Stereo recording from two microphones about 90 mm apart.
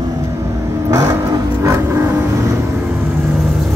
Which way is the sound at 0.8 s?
45° right (ahead or behind).